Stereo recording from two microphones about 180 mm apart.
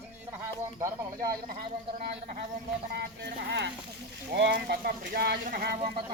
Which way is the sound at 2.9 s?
70° right (ahead or behind).